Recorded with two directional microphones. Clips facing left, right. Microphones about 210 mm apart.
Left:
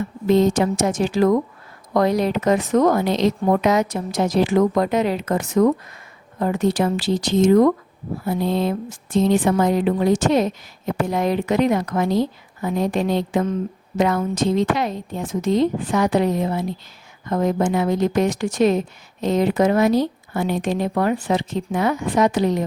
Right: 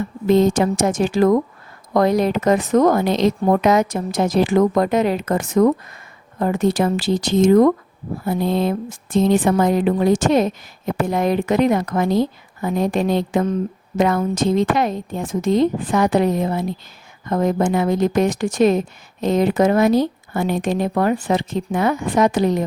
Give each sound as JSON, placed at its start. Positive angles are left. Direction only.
{"t": 0.3, "sound": "speech", "side_deg": -50}